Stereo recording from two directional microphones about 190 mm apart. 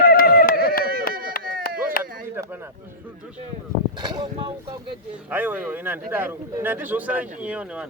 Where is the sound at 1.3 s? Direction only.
50° left (ahead or behind).